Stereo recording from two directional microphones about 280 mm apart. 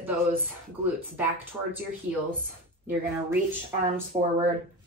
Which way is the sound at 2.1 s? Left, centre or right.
Right.